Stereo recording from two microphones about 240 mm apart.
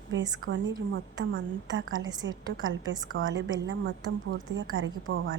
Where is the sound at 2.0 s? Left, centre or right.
Centre.